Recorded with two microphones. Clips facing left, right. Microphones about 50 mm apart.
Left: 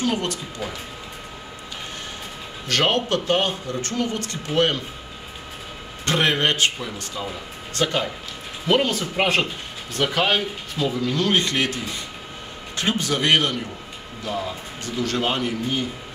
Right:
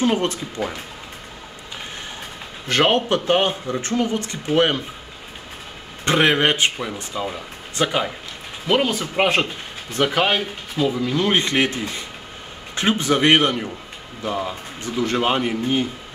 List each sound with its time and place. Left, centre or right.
0.0 s speech: right
2.7 s speech: right
6.0 s speech: centre